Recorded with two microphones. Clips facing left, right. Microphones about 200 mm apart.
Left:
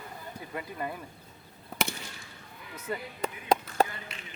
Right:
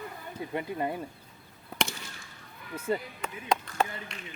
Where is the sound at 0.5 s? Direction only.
25° right (ahead or behind).